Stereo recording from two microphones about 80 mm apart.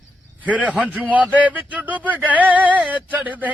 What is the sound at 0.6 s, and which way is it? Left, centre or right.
Speech, centre.